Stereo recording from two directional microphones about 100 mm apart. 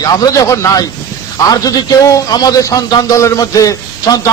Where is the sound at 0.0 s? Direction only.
40° left (ahead or behind).